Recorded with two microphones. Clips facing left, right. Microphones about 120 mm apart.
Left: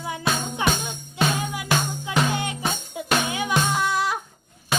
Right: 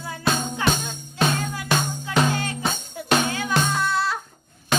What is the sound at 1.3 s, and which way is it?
Music, 15° left (ahead or behind).